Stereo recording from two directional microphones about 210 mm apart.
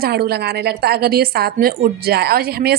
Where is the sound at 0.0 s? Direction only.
50° right (ahead or behind).